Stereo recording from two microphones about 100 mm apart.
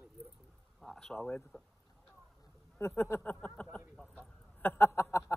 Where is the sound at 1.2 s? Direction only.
20° left (ahead or behind).